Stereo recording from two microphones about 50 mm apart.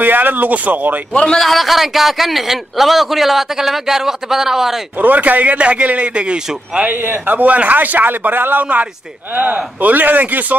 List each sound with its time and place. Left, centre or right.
0.0 s a man's voice: right
1.1 s a man's voice: centre
1.4 s a man's voice: centre
5.0 s a man's voice: right
6.9 s a man's voice: right